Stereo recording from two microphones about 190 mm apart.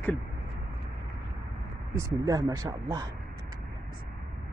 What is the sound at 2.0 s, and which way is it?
Speech, 20° right (ahead or behind).